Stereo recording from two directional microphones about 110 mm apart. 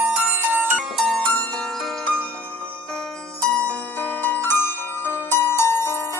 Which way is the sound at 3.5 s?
10° left (ahead or behind).